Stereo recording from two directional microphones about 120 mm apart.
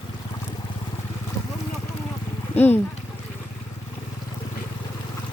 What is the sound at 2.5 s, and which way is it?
Speech, 15° left (ahead or behind).